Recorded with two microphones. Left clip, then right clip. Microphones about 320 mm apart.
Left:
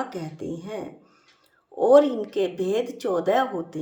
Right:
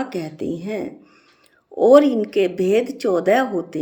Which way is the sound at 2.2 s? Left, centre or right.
Centre.